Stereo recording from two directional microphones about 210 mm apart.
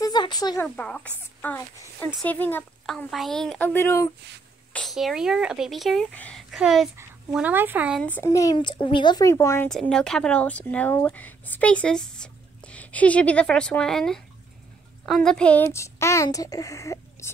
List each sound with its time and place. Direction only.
0.0 s a sound: 20° left (ahead or behind)
0.7 s speech: 5° left (ahead or behind)
4.7 s speech: centre (ahead or behind)
8.0 s speech: 10° left (ahead or behind)
9.7 s speech: centre (ahead or behind)